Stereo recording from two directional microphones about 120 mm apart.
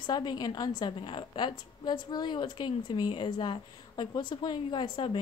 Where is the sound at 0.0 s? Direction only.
40° left (ahead or behind).